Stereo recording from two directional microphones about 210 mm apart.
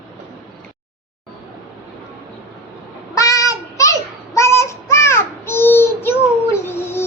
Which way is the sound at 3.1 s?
15° left (ahead or behind).